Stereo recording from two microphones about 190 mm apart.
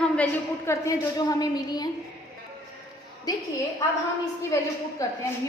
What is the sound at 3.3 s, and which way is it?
Speech, 20° left (ahead or behind).